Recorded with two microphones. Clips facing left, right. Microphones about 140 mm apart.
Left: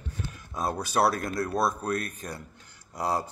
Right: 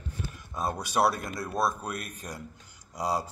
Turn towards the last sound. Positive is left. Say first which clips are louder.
# left 1 dB
turn(degrees=-10)  # may be behind; listen again after turning